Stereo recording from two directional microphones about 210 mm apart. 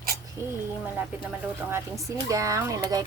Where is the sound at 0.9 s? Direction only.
10° right (ahead or behind).